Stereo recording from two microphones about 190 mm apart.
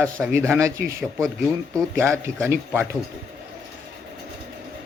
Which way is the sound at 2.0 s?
15° right (ahead or behind).